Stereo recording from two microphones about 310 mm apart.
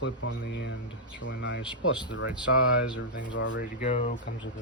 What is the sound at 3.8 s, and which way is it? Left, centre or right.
Speech, left.